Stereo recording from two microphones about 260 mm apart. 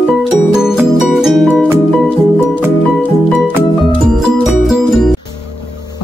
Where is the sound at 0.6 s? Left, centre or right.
Centre.